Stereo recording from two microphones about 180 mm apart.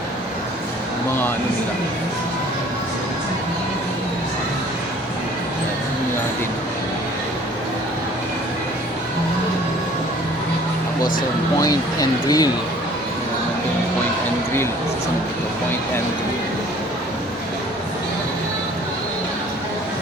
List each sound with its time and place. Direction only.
11.6 s speech: 20° left (ahead or behind)